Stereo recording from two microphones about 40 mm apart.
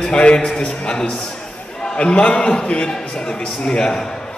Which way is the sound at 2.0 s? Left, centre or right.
Left.